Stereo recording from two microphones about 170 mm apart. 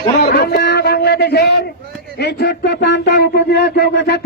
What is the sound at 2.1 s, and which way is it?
A man's voice, 75° left (ahead or behind).